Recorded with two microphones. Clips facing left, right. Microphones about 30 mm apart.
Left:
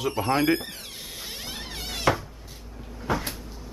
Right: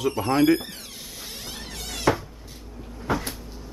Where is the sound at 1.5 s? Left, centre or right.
Centre.